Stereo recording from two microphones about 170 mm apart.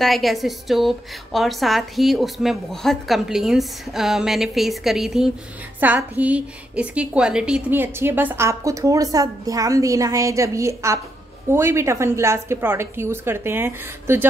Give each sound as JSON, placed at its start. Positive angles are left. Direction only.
{"t": 0.0, "sound": "a woman's voice", "side_deg": 0}